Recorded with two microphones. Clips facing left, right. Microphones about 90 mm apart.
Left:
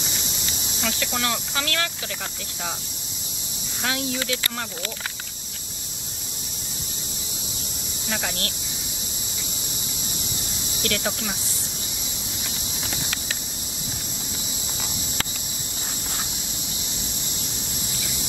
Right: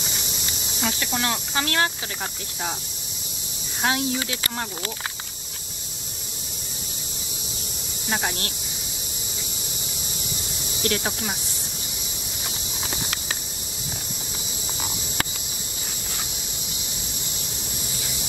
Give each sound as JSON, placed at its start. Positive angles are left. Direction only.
{"t": 0.8, "sound": "speech", "side_deg": -30}
{"t": 3.8, "sound": "speech", "side_deg": -30}
{"t": 10.8, "sound": "speech", "side_deg": -30}